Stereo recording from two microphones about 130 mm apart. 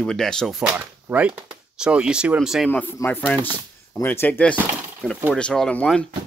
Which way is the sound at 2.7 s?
15° left (ahead or behind).